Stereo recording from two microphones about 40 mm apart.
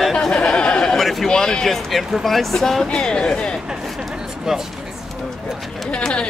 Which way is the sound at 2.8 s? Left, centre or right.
Left.